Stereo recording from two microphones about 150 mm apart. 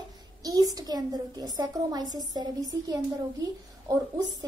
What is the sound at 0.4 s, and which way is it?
A child's voice, 25° right (ahead or behind).